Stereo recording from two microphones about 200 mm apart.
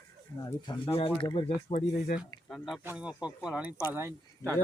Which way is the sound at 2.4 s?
Centre (ahead or behind).